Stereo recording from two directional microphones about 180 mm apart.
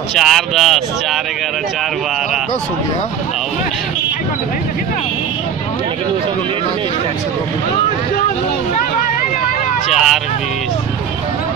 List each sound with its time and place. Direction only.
0.1 s speech: centre (ahead or behind)
9.8 s vehicle: centre (ahead or behind)